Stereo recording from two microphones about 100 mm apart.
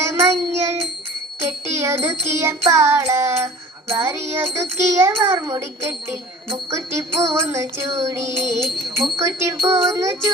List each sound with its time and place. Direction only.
0.0 s child singing: 25° right (ahead or behind)
1.4 s music: 25° right (ahead or behind)
9.1 s a sound: 30° right (ahead or behind)